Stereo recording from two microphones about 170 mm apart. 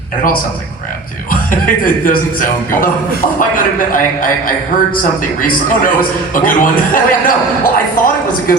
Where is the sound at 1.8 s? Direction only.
55° left (ahead or behind).